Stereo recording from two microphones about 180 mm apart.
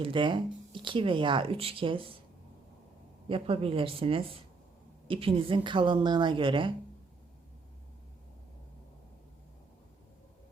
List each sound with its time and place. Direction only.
0.0 s speech: 25° right (ahead or behind)
3.2 s speech: 30° right (ahead or behind)